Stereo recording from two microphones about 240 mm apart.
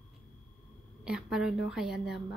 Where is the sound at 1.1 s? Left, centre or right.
Centre.